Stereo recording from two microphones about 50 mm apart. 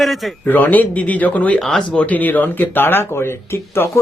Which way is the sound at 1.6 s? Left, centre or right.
Centre.